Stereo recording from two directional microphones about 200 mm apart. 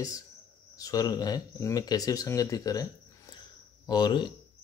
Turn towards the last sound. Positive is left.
turn(degrees=20)  # may be behind; listen again after turning